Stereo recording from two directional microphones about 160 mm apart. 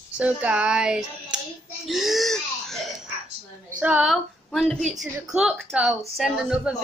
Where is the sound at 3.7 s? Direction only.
10° right (ahead or behind).